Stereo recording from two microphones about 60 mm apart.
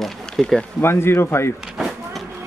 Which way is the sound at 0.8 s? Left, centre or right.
Left.